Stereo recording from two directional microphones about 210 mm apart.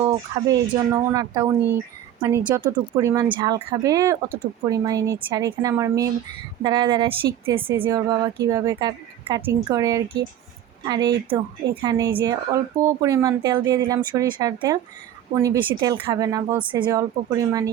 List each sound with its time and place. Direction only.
0.0 s speech: 20° right (ahead or behind)